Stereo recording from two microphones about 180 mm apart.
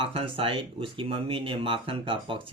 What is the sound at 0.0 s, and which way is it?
Speech, 30° right (ahead or behind).